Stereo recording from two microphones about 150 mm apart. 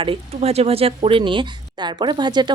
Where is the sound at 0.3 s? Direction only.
45° right (ahead or behind).